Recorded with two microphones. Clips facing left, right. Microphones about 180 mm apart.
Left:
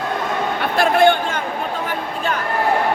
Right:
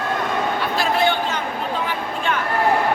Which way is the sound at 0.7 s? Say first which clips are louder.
Left 7 dB; 55° left (ahead or behind).